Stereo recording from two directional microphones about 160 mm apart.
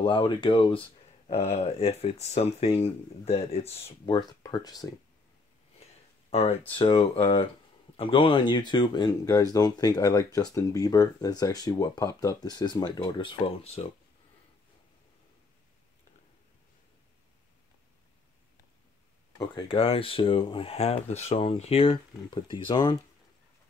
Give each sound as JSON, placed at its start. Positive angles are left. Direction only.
{"t": 0.0, "sound": "speech", "side_deg": 30}
{"t": 4.0, "sound": "speech", "side_deg": 25}
{"t": 6.3, "sound": "speech", "side_deg": 40}
{"t": 19.3, "sound": "speech", "side_deg": 30}